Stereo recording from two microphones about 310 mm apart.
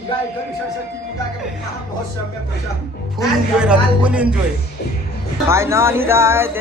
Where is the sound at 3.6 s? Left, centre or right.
Centre.